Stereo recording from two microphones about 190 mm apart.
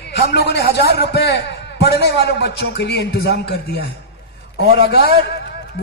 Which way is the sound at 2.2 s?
60° left (ahead or behind).